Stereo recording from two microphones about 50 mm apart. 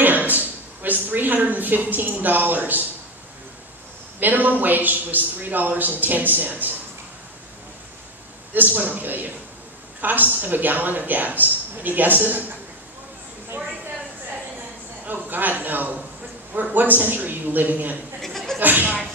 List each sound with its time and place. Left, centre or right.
0.0 s a sound: right
4.2 s a man's voice: right
8.5 s a man's voice: right
15.0 s a man's voice: right
18.2 s chuckle: centre
18.6 s a man's voice: right